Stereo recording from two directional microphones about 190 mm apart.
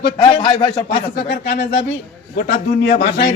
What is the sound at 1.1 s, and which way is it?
A man's voice, 60° left (ahead or behind).